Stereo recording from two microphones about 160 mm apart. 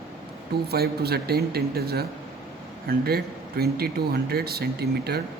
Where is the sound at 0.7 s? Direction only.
80° right.